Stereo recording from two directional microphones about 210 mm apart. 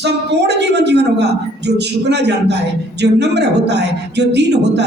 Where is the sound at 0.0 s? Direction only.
55° right (ahead or behind).